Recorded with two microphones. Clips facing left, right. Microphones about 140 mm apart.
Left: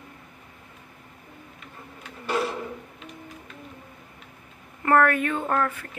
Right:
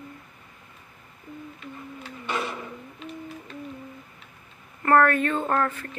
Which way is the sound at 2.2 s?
5° left (ahead or behind).